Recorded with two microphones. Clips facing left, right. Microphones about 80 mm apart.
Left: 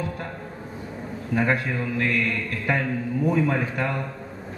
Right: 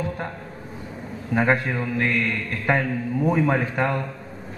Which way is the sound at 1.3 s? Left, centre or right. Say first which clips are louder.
Right 2 dB; right.